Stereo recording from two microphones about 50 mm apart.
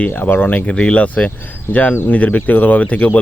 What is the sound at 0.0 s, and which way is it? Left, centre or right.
Speech, left.